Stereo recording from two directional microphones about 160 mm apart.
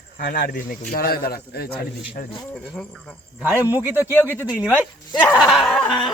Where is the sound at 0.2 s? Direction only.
70° left (ahead or behind).